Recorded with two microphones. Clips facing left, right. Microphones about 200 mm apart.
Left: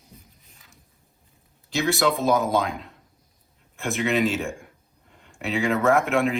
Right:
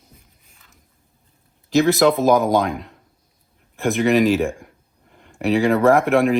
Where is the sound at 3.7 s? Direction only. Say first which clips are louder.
Right 7 dB; 35° right (ahead or behind).